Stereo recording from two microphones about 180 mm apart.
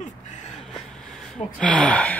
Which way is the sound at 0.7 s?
5° left (ahead or behind).